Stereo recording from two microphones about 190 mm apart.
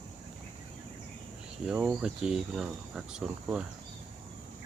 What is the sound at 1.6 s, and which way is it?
Speech, 5° right (ahead or behind).